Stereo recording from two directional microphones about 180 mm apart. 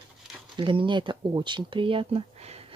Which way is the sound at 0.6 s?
25° right (ahead or behind).